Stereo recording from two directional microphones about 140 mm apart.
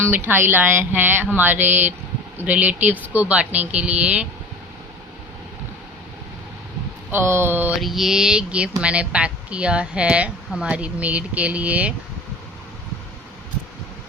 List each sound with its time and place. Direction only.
0.0 s speech: 15° right (ahead or behind)
7.1 s speech: 15° right (ahead or behind)
7.8 s speech: centre (ahead or behind)